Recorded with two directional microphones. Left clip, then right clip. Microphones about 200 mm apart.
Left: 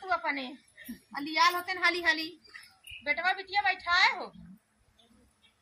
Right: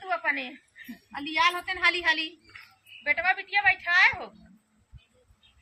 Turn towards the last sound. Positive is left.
turn(degrees=-5)  # may be behind; listen again after turning